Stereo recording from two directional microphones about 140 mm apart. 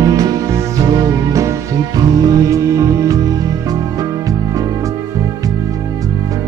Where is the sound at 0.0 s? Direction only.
25° right (ahead or behind).